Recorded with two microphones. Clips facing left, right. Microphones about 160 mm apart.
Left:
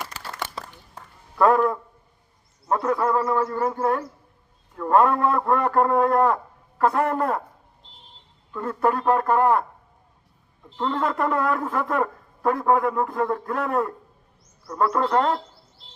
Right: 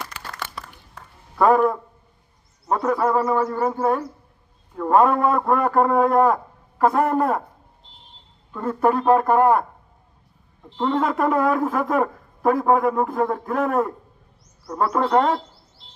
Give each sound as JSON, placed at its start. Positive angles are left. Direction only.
{"t": 0.1, "sound": "crumpling", "side_deg": 40}
{"t": 2.6, "sound": "a man's voice", "side_deg": -20}
{"t": 8.5, "sound": "a man's voice", "side_deg": -25}
{"t": 10.8, "sound": "a man's voice", "side_deg": -20}